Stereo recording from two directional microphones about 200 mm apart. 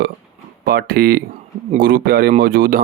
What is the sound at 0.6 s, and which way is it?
Speech, 45° right (ahead or behind).